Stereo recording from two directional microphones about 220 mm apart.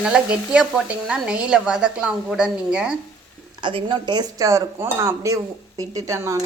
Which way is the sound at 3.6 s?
20° right (ahead or behind).